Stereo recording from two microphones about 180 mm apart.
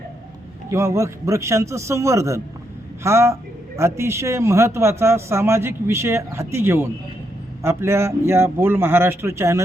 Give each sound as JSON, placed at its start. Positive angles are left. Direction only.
{"t": 0.7, "sound": "a man's voice", "side_deg": -15}